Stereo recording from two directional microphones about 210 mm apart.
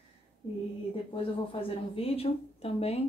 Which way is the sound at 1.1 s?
25° left (ahead or behind).